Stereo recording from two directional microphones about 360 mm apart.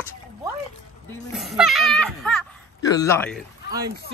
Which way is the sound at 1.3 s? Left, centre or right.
Centre.